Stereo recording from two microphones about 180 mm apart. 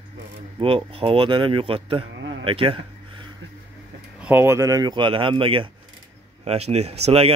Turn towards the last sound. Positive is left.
turn(degrees=-35)  # may be behind; listen again after turning